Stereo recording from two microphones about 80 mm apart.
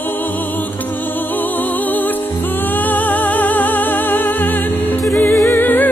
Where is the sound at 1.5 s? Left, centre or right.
Left.